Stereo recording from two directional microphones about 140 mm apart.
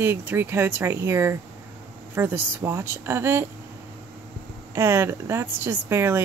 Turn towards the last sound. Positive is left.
turn(degrees=-15)  # may be behind; listen again after turning